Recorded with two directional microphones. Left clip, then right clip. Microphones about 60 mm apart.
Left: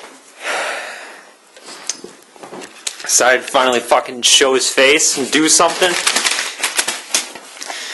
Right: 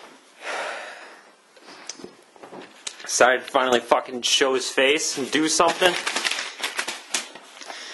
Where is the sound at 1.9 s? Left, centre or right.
Left.